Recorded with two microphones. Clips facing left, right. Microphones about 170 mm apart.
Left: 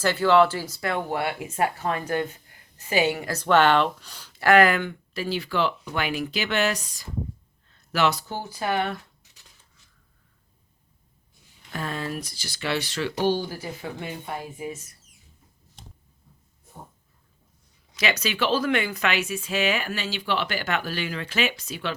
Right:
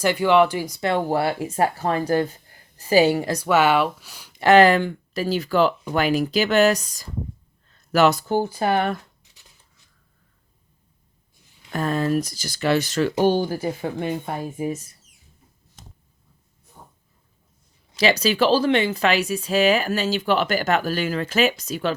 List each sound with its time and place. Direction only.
0.0 s speech: 15° right (ahead or behind); by 3.2 s 35° right (ahead or behind)
3.2 s speech: 10° right (ahead or behind)
4.4 s speech: 25° right (ahead or behind); by 9.0 s 50° right (ahead or behind)
11.7 s speech: 45° right (ahead or behind)
17.9 s speech: 35° right (ahead or behind)